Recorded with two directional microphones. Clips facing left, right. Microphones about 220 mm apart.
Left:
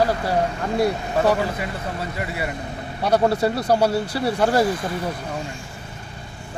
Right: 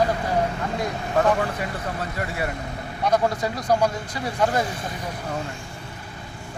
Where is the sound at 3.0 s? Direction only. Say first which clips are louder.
Left 4 dB; 35° left (ahead or behind).